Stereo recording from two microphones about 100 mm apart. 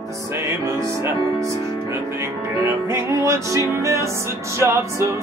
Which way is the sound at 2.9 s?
30° right (ahead or behind).